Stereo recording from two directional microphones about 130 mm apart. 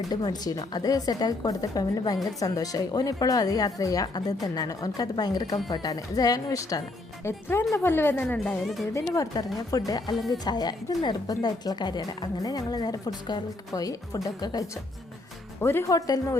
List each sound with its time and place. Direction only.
0.1 s speech: 30° left (ahead or behind); by 8.5 s 15° left (ahead or behind)
8.9 s a woman's voice: 25° left (ahead or behind)